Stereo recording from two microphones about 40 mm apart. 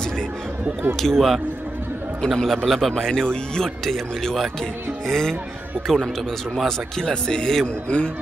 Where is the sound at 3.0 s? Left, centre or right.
Centre.